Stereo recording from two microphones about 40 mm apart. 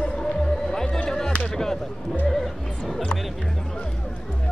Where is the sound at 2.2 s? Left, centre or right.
Centre.